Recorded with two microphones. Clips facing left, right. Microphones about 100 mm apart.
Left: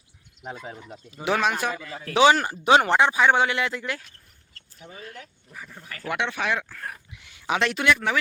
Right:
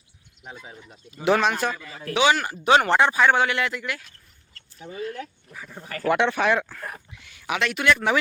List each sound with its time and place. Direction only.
0.4 s speech: 55° left (ahead or behind)
1.1 s a man's voice: centre (ahead or behind)
2.1 s speech: 35° left (ahead or behind)
6.1 s speech: 45° right (ahead or behind)
7.1 s a sound: 20° left (ahead or behind)
7.9 s speech: 10° right (ahead or behind)